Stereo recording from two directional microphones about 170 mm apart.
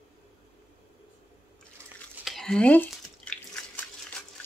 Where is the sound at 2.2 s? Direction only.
Centre (ahead or behind).